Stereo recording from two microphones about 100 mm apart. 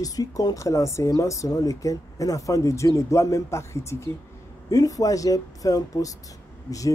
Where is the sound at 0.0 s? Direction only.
35° left (ahead or behind).